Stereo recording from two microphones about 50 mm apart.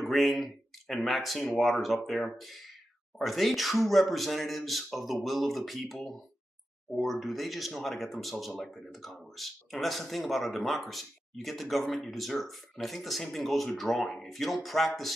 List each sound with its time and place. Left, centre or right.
0.0 s speech: centre